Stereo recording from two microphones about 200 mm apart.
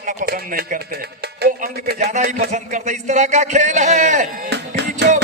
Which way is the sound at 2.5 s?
35° right (ahead or behind).